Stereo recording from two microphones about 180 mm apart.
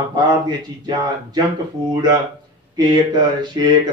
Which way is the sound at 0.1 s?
25° right (ahead or behind).